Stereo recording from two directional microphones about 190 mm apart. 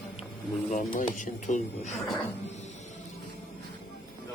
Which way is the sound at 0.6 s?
45° left (ahead or behind).